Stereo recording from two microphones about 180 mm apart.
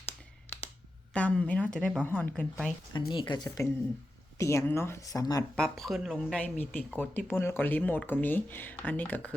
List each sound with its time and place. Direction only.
1.1 s speech: 5° left (ahead or behind)
3.1 s speech: 25° left (ahead or behind)
5.5 s speech: centre (ahead or behind)